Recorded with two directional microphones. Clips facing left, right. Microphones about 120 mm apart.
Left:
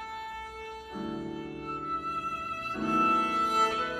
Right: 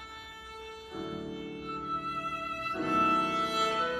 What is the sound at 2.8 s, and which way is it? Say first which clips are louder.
Music: left 1 dB; 30° left (ahead or behind).